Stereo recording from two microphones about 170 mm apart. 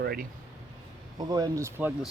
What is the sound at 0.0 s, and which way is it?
Speech, 65° right (ahead or behind).